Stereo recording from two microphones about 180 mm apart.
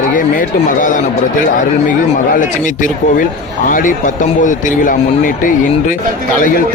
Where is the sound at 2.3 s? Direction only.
45° left (ahead or behind).